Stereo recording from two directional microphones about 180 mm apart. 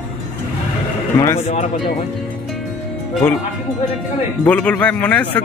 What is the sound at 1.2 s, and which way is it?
Speech, 15° left (ahead or behind).